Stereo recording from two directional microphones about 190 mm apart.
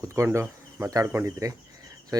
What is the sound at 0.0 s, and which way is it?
Speech, 15° right (ahead or behind).